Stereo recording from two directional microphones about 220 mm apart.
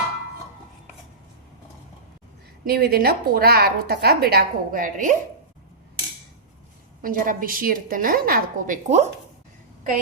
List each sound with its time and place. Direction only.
2.6 s a woman's voice: 45° right (ahead or behind)
7.0 s a woman's voice: 40° right (ahead or behind)